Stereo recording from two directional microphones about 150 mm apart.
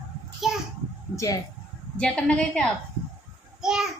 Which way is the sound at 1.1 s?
20° left (ahead or behind).